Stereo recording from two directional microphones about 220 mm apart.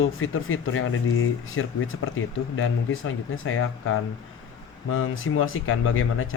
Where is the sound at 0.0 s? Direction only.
65° left (ahead or behind).